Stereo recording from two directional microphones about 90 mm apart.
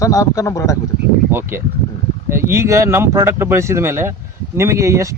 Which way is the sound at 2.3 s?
30° right (ahead or behind).